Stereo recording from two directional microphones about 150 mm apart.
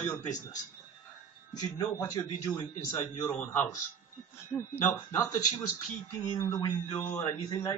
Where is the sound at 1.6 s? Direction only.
25° left (ahead or behind).